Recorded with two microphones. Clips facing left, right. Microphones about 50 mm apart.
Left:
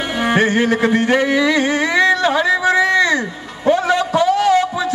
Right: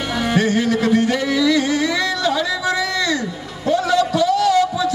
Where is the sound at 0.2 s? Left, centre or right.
Left.